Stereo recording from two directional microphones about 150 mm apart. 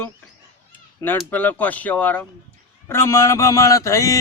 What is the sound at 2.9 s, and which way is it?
Speech, 20° left (ahead or behind).